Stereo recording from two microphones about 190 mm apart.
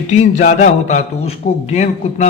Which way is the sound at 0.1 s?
40° left (ahead or behind).